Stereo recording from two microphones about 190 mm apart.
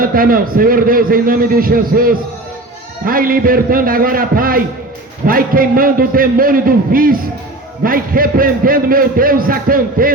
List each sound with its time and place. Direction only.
0.0 s a man's voice: 50° right (ahead or behind)